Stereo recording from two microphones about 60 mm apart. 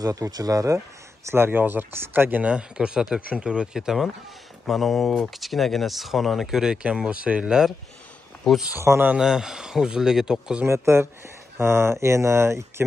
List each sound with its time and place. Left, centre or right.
0.0 s speech: right
1.3 s speech: right
2.4 s speech: centre
8.5 s speech: centre
8.9 s speech: centre
10.7 s speech: right